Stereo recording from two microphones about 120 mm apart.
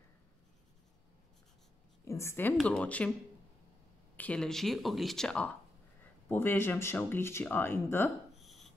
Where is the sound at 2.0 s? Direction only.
25° left (ahead or behind).